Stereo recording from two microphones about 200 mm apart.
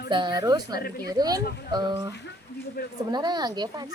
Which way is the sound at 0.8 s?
50° left (ahead or behind).